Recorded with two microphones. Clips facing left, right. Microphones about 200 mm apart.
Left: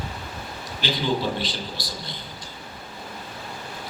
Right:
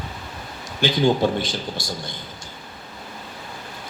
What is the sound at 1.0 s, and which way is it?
Speech, 45° right (ahead or behind).